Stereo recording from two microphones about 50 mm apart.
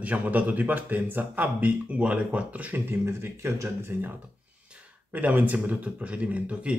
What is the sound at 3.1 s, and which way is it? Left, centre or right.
Speech, right.